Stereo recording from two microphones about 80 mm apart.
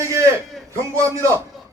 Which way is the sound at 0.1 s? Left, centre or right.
Right.